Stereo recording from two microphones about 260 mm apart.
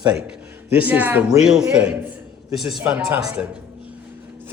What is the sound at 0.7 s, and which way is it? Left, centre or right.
A man's voice, centre.